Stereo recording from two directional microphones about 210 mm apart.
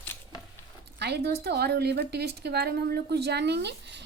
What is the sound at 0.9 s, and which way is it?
A woman's voice, 50° right (ahead or behind).